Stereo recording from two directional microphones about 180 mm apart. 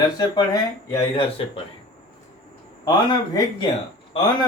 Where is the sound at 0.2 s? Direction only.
20° left (ahead or behind).